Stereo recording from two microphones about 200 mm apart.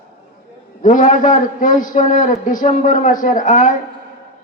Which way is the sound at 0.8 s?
40° left (ahead or behind).